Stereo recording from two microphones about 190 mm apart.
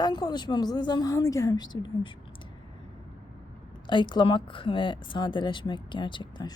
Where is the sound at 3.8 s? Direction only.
25° left (ahead or behind).